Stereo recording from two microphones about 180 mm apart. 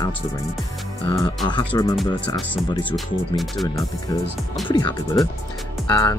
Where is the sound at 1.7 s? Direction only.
20° left (ahead or behind).